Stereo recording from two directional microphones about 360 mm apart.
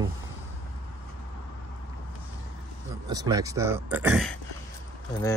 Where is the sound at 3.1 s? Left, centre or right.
Centre.